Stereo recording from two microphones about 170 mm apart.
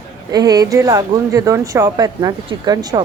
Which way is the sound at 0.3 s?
20° right (ahead or behind).